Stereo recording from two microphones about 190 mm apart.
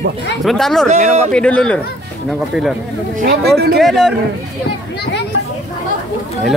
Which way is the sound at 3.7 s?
Centre (ahead or behind).